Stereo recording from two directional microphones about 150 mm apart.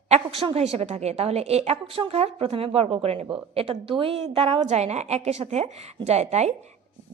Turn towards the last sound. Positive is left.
turn(degrees=-45)  # may be behind; listen again after turning